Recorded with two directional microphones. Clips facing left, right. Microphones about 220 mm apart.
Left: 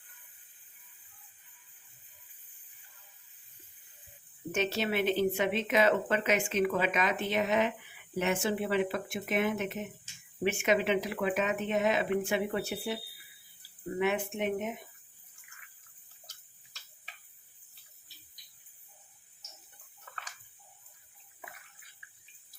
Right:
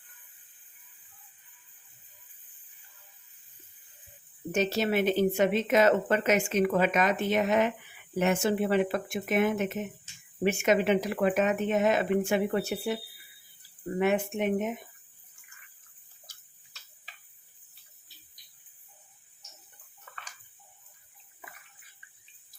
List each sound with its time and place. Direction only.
4.5 s a woman's voice: 40° right (ahead or behind)
14.0 s a woman's voice: 45° right (ahead or behind)